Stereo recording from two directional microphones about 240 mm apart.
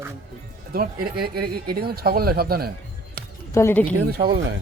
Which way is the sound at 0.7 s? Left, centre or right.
Right.